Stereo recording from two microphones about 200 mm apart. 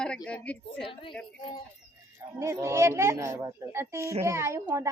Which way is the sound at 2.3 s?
15° right (ahead or behind).